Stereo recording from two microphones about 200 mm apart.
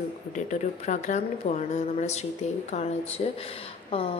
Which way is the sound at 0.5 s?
35° left (ahead or behind).